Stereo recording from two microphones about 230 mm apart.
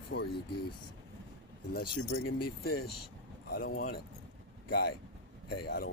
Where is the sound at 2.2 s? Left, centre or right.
Left.